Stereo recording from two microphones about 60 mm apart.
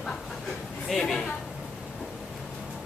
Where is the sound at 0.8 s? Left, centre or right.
Centre.